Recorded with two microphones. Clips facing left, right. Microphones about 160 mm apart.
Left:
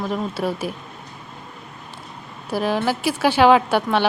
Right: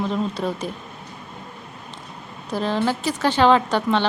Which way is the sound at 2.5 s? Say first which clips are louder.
Left 1 dB; 10° left (ahead or behind).